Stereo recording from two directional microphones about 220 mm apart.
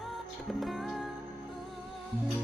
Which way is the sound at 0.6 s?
Centre (ahead or behind).